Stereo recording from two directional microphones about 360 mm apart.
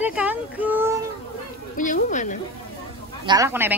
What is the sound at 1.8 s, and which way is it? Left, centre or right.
Speech, left.